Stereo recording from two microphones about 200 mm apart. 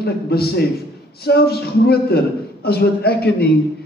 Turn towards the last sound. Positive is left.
turn(degrees=50)  # may be behind; listen again after turning